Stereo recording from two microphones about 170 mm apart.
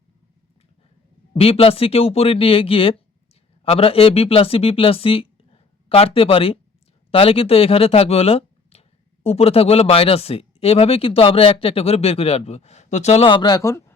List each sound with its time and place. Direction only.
1.4 s speech: 35° left (ahead or behind); by 13.9 s 15° left (ahead or behind)